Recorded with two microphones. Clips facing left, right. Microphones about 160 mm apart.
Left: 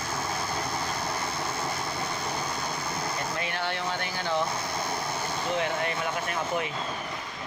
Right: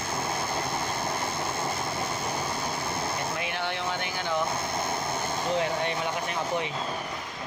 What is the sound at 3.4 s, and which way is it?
Vehicle, 15° right (ahead or behind).